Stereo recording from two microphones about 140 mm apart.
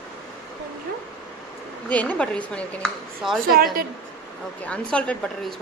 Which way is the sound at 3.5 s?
90° right.